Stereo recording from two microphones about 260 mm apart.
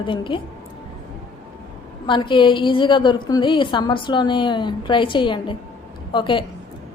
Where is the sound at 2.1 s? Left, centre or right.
Centre.